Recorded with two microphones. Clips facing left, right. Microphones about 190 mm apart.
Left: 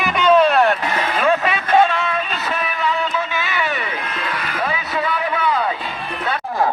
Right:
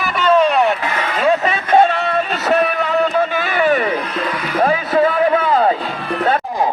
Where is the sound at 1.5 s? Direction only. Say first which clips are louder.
Right 2 dB; 40° right (ahead or behind).